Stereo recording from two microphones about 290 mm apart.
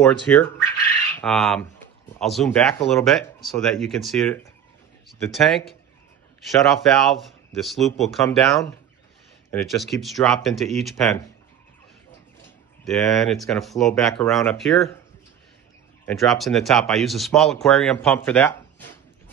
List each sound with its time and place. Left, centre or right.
0.0 s speech: centre
12.8 s speech: centre
16.1 s speech: centre